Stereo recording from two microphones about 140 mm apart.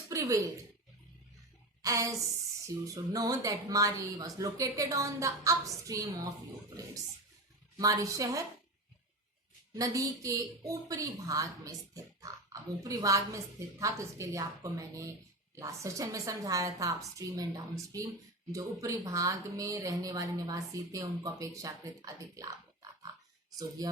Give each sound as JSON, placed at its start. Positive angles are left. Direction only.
{"t": 0.1, "sound": "speech", "side_deg": -25}
{"t": 1.8, "sound": "a sound", "side_deg": -25}
{"t": 2.8, "sound": "a woman's voice", "side_deg": -25}
{"t": 7.8, "sound": "a woman's voice", "side_deg": -25}
{"t": 9.7, "sound": "a woman's voice", "side_deg": -25}